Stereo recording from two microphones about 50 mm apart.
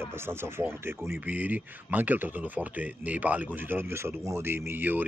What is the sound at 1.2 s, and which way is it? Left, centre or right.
A man's voice, right.